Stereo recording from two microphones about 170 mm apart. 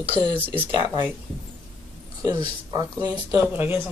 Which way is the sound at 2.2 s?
25° right (ahead or behind).